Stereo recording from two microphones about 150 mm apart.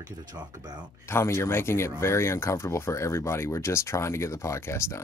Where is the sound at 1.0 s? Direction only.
15° left (ahead or behind).